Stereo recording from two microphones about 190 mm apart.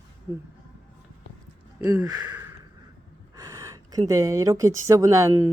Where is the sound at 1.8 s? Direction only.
15° right (ahead or behind).